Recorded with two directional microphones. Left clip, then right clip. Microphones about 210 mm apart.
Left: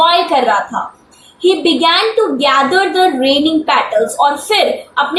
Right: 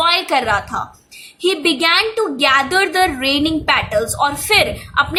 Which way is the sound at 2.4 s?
50° right (ahead or behind).